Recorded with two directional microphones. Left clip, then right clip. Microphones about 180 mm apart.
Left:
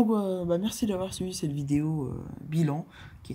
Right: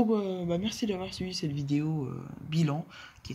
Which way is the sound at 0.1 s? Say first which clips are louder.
Left 3 dB; 40° left (ahead or behind).